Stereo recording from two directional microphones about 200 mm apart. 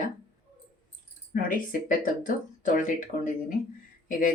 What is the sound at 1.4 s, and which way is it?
Speech, 45° left (ahead or behind).